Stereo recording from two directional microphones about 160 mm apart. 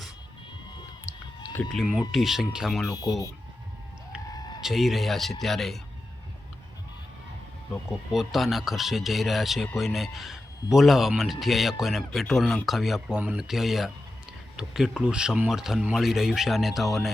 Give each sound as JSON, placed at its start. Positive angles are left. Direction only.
{"t": 1.5, "sound": "a man's voice", "side_deg": 0}
{"t": 4.3, "sound": "a sound", "side_deg": 25}
{"t": 4.6, "sound": "a man's voice", "side_deg": 0}
{"t": 8.1, "sound": "a man's voice", "side_deg": 0}